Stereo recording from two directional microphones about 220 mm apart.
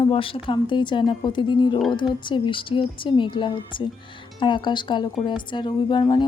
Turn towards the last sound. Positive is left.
turn(degrees=20)  # may be behind; listen again after turning